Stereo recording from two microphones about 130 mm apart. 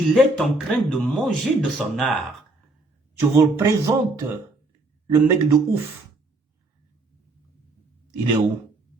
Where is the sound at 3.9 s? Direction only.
30° right (ahead or behind).